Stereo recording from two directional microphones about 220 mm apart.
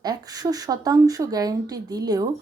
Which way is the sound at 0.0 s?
15° right (ahead or behind).